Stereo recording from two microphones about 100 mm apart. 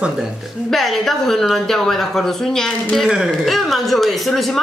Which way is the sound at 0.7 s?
Centre (ahead or behind).